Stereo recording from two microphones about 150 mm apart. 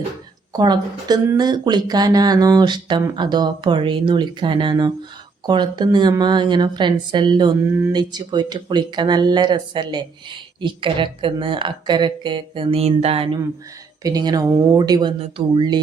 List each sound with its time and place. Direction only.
0.5 s speech: 25° right (ahead or behind)
14.0 s speech: 25° right (ahead or behind)